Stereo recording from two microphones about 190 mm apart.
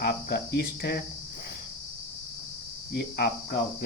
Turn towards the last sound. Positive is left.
turn(degrees=60)  # may be behind; listen again after turning